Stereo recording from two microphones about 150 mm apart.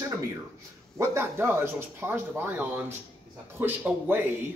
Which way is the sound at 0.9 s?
15° right (ahead or behind).